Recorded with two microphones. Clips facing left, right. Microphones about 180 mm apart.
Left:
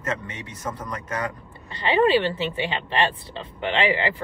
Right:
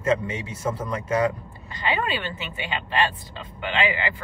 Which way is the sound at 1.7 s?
30° left (ahead or behind).